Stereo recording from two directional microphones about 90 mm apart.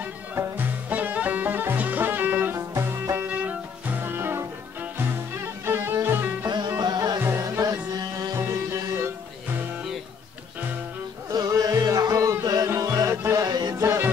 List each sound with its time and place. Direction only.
0.4 s music: 20° right (ahead or behind)
6.8 s music: 50° right (ahead or behind)
7.2 s music: 25° right (ahead or behind)
7.4 s music: 40° right (ahead or behind)
8.4 s music: 25° right (ahead or behind)
11.3 s music: 45° right (ahead or behind)
13.4 s music: 50° right (ahead or behind)
13.7 s music: 35° right (ahead or behind)